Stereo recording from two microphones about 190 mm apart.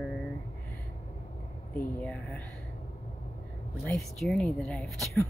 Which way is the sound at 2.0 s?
5° left (ahead or behind).